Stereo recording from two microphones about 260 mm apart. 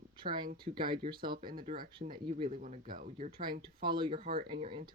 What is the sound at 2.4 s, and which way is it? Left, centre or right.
Speech, right.